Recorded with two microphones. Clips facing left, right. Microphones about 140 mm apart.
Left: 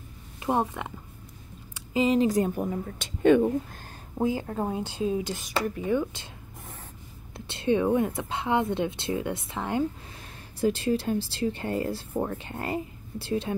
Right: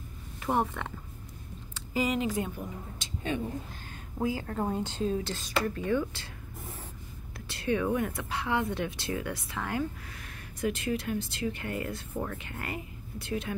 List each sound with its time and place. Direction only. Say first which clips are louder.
0.5 s speech: left 2 dB; 15° left (ahead or behind)
2.0 s a woman's voice: left 7 dB; 30° left (ahead or behind); by 3.5 s 60° left (ahead or behind)
4.2 s speech: left 4 dB; 20° left (ahead or behind)
4.5 s speech: left 1 dB; 10° left (ahead or behind)
7.3 s speech: left 5 dB; 25° left (ahead or behind)